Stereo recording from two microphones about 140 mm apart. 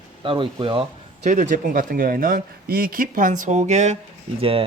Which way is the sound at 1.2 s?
65° right (ahead or behind).